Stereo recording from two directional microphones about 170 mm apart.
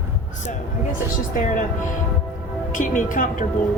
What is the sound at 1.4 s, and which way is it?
Speech, 50° left (ahead or behind).